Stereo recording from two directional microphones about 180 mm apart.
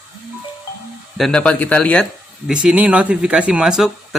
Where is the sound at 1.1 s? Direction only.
5° left (ahead or behind).